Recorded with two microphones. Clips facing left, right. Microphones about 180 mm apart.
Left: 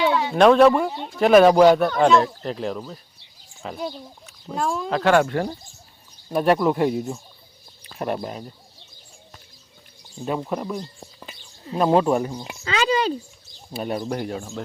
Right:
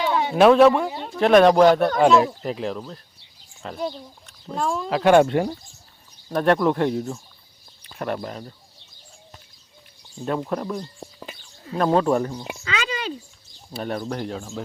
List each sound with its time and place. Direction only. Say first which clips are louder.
0.3 s speech: right 1 dB; centre (ahead or behind)
5.0 s speech: right 3 dB; 20° right (ahead or behind)
6.3 s speech: even; 5° left (ahead or behind)
10.5 s speech: even; 5° left (ahead or behind)
12.6 s a sound: left 8 dB; 35° left (ahead or behind)
13.7 s speech: left 1 dB; 15° left (ahead or behind)